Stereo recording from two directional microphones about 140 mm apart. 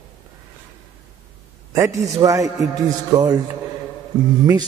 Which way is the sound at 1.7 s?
20° right (ahead or behind).